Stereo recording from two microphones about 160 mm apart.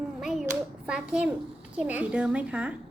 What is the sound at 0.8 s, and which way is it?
A child's voice, 5° right (ahead or behind).